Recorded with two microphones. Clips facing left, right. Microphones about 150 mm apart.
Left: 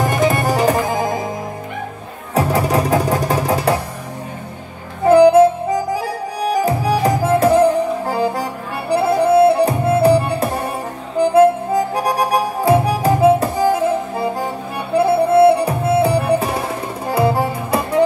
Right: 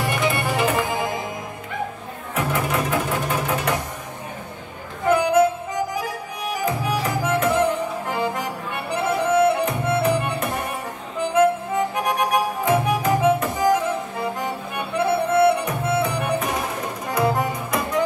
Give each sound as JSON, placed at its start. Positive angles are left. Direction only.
{"t": 0.0, "sound": "music", "side_deg": 40}
{"t": 2.3, "sound": "music", "side_deg": 35}
{"t": 5.0, "sound": "music", "side_deg": 35}